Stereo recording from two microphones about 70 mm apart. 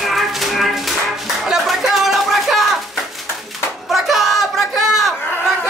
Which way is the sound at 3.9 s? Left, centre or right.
Centre.